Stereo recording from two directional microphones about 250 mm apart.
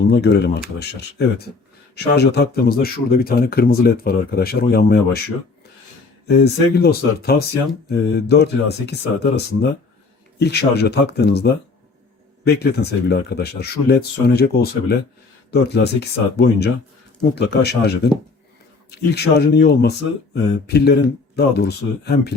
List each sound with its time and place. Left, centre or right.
0.1 s speech: left
6.2 s speech: left